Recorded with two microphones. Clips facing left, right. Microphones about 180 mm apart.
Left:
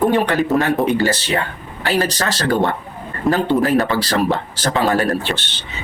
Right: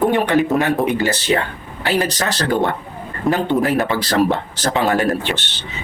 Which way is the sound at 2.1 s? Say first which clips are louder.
Even; 20° right (ahead or behind).